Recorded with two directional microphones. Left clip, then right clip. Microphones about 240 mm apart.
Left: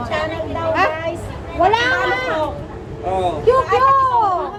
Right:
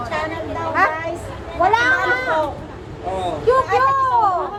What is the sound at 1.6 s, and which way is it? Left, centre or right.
Speech, left.